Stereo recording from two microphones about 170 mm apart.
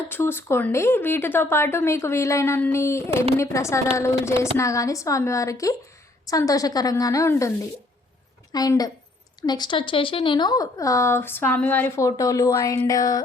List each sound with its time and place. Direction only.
0.1 s speech: 10° left (ahead or behind)
8.5 s speech: 20° left (ahead or behind)